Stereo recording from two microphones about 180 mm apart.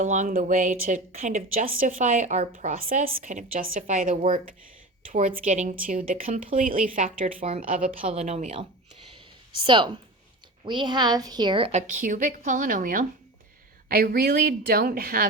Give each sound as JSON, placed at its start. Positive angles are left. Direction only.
{"t": 0.0, "sound": "speech", "side_deg": -45}
{"t": 8.1, "sound": "speech", "side_deg": -40}
{"t": 9.6, "sound": "a woman's voice", "side_deg": -25}
{"t": 11.8, "sound": "a woman's voice", "side_deg": -45}